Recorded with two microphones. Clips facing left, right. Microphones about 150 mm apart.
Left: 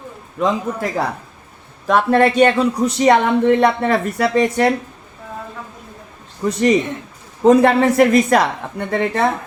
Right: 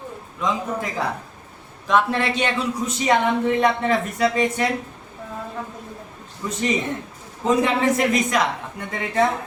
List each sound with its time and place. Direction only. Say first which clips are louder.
0.3 s a man's voice: left 5 dB; 65° left (ahead or behind)
2.0 s a man's voice: left 9 dB; 50° left (ahead or behind)
6.5 s a man's voice: left 7 dB; 70° left (ahead or behind)